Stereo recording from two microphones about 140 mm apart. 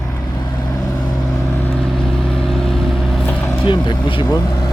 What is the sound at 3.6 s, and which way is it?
Speech, 35° left (ahead or behind).